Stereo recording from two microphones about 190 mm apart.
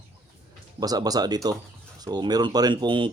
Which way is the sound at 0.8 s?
20° right (ahead or behind).